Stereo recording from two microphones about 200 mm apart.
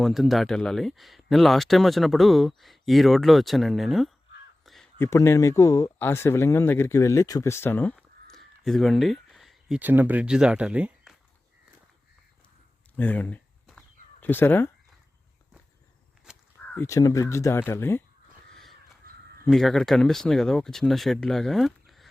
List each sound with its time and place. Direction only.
0.0 s speech: centre (ahead or behind)
4.6 s crow: centre (ahead or behind)
4.9 s speech: 15° left (ahead or behind); by 11.1 s 5° right (ahead or behind)
13.0 s a sound: 10° left (ahead or behind)
16.3 s walk: 5° right (ahead or behind)
16.7 s speech: 15° left (ahead or behind)
19.5 s speech: centre (ahead or behind)